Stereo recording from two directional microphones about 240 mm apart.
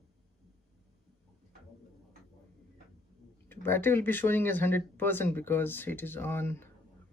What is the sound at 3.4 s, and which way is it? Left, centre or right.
Speech, centre.